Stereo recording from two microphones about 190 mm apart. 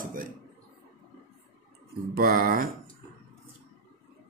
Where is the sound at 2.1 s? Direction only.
50° right (ahead or behind).